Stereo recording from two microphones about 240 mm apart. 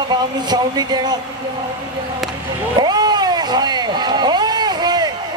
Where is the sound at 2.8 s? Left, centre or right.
Centre.